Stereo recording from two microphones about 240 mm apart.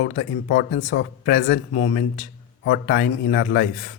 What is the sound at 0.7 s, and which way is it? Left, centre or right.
Speech, left.